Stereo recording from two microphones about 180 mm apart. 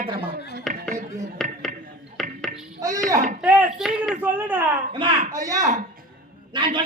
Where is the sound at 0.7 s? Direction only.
Centre (ahead or behind).